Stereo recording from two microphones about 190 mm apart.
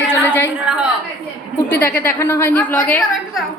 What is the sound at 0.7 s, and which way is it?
Speech, 5° right (ahead or behind).